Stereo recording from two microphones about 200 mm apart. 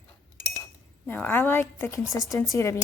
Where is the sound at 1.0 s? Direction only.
10° left (ahead or behind).